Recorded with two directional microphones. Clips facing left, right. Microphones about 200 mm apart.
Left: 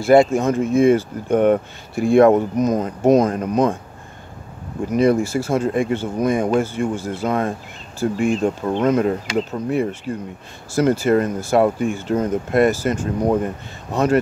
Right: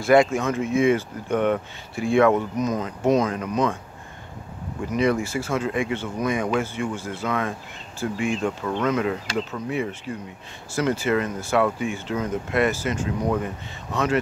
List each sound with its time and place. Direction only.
0.0 s speech: 30° left (ahead or behind)
4.9 s speech: 40° left (ahead or behind)